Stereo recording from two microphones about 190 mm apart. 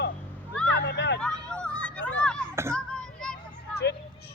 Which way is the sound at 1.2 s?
5° left (ahead or behind).